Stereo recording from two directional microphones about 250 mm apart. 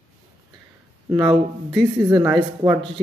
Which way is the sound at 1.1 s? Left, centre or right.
Centre.